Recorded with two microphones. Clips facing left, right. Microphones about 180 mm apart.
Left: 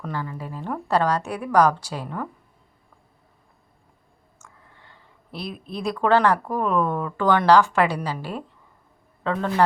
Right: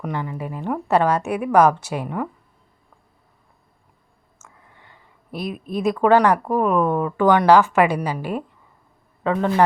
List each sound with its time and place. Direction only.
0.0 s speech: 20° right (ahead or behind)
1.5 s speech: 20° right (ahead or behind)
4.4 s a sound: 10° right (ahead or behind)
5.7 s speech: 10° right (ahead or behind)